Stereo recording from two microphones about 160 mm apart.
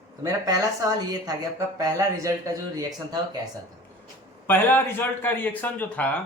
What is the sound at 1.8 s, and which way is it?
Speech, 20° right (ahead or behind).